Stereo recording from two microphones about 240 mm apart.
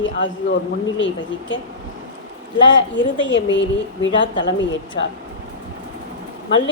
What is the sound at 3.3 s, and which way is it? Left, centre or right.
Speech, left.